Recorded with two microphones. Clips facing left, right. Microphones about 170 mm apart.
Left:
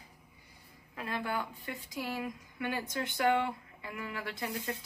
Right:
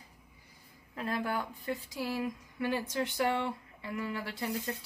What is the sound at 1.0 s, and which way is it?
Speech, 35° right (ahead or behind).